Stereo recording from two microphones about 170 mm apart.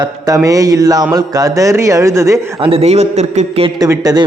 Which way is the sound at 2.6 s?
35° right (ahead or behind).